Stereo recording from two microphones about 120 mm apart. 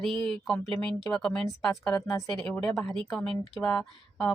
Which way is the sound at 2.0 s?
30° left (ahead or behind).